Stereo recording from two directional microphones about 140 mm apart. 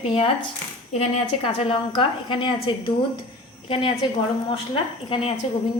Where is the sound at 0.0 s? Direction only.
40° left (ahead or behind).